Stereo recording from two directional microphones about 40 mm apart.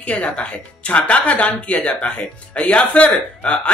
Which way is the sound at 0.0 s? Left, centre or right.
Left.